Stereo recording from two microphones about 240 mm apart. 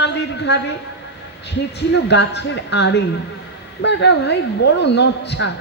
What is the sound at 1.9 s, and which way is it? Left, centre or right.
A man's voice, left.